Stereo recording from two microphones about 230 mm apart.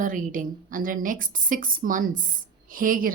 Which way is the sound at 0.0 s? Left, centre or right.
Right.